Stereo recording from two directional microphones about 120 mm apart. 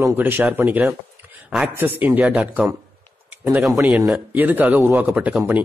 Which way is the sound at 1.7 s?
15° right (ahead or behind).